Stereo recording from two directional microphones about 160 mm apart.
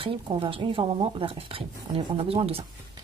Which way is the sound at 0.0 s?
35° right (ahead or behind).